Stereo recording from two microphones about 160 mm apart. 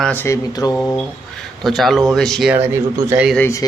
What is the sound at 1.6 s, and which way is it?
Speech, centre (ahead or behind).